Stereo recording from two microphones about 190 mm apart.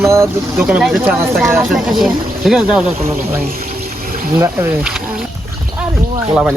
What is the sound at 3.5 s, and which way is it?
Music, 50° right (ahead or behind).